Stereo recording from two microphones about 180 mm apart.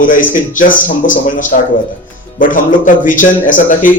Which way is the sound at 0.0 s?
50° left (ahead or behind).